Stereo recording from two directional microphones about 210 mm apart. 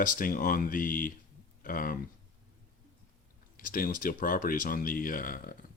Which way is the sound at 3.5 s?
40° left (ahead or behind).